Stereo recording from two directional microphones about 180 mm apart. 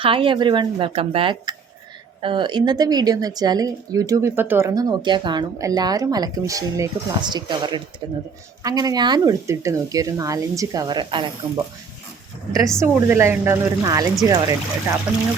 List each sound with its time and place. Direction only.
0.0 s speech: 30° right (ahead or behind)
12.5 s a woman's voice: 15° right (ahead or behind)